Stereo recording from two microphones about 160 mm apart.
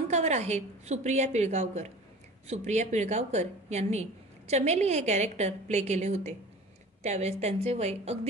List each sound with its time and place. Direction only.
0.1 s a woman's voice: 45° right (ahead or behind)